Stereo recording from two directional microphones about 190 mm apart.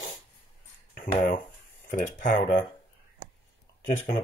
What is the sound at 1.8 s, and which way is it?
Speech, 45° left (ahead or behind).